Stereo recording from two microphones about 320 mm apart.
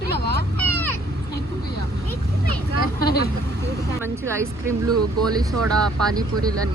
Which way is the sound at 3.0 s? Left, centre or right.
Left.